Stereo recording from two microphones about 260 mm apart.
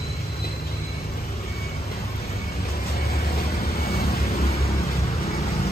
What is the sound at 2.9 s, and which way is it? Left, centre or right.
Vehicle, left.